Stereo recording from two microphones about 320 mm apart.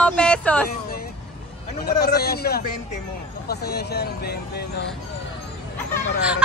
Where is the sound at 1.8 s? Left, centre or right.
Left.